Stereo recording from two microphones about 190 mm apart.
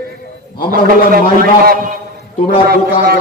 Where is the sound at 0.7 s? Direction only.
50° right (ahead or behind).